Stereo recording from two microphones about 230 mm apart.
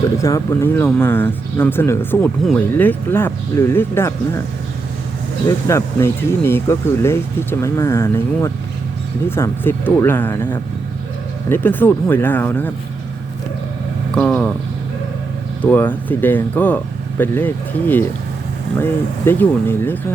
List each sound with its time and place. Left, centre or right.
0.2 s speech: centre
5.5 s speech: centre
14.2 s speech: centre
15.6 s speech: centre